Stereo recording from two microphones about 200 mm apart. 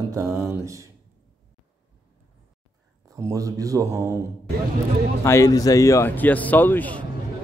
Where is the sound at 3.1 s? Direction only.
15° right (ahead or behind).